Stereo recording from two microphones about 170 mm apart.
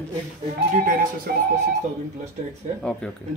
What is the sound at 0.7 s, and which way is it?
Speech, 55° right (ahead or behind).